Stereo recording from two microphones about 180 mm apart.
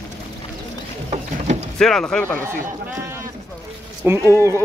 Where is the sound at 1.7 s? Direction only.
5° left (ahead or behind).